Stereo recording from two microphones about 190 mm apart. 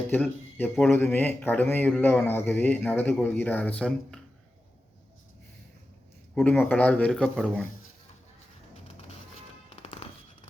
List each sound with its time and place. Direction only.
0.1 s speech: 10° left (ahead or behind)
6.3 s speech: 5° left (ahead or behind)
9.6 s music: 30° left (ahead or behind)